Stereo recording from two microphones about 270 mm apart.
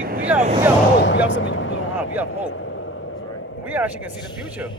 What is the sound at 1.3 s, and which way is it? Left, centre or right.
Speech, left.